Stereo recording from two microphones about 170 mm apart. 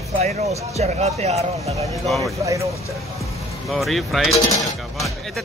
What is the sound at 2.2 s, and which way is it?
Speech, 20° right (ahead or behind).